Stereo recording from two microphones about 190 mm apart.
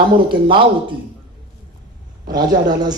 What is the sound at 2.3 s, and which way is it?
Speech, 20° right (ahead or behind).